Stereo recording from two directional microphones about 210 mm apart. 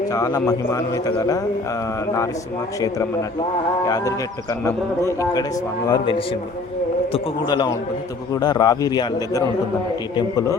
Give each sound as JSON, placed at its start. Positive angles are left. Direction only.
{"t": 0.1, "sound": "speech", "side_deg": 15}
{"t": 3.8, "sound": "a man's voice", "side_deg": 15}